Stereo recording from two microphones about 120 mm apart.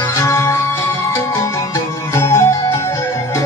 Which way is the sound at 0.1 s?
20° left (ahead or behind).